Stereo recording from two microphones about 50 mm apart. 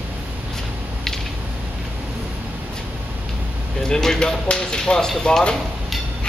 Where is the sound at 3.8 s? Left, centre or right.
Centre.